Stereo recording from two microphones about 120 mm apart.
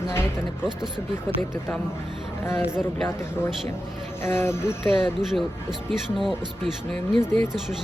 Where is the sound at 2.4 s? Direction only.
20° left (ahead or behind).